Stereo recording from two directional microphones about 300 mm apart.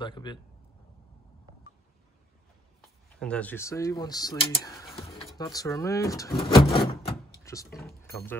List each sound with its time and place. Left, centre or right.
0.0 s speech: centre
3.2 s speech: centre
6.7 s door: centre
7.8 s speech: centre